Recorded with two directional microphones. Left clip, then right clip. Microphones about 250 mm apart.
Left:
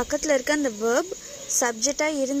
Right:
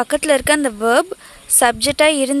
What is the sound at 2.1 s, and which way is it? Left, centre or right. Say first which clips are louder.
Speech: right 9 dB; right.